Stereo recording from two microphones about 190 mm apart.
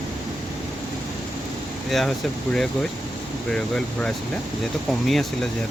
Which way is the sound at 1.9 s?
Centre (ahead or behind).